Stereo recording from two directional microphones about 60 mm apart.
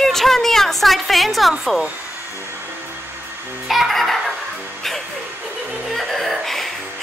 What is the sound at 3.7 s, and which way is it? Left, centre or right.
Giggle, centre.